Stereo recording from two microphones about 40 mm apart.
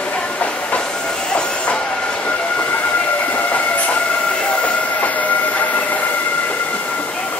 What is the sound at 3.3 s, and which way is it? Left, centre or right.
Train, left.